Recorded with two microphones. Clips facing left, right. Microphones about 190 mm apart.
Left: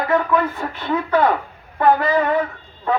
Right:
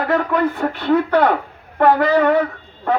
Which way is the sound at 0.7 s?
65° right (ahead or behind).